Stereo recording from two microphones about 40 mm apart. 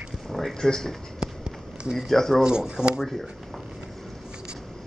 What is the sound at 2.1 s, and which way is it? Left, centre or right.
Speech, centre.